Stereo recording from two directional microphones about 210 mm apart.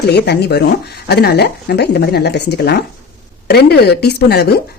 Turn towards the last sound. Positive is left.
turn(degrees=50)  # may be behind; listen again after turning